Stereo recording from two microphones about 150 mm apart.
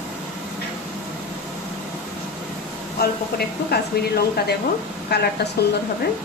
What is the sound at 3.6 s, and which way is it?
Speech, 90° left.